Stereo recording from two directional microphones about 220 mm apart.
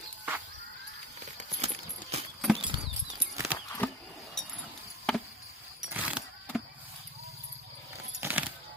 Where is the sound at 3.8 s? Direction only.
10° left (ahead or behind).